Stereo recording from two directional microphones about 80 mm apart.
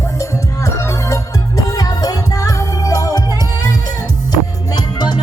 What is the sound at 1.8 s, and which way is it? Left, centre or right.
Music, left.